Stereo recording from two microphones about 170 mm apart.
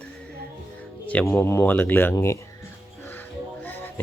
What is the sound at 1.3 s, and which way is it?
Speech, 15° left (ahead or behind).